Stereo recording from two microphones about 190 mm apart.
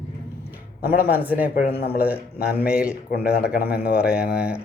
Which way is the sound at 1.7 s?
60° left (ahead or behind).